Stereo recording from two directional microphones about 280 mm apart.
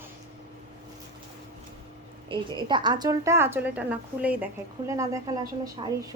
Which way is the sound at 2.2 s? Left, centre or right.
Centre.